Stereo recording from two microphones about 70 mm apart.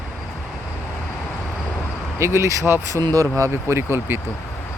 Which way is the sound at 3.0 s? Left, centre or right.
Right.